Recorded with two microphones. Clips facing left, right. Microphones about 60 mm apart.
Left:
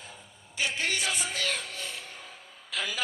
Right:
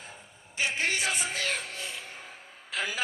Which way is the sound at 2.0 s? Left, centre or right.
Right.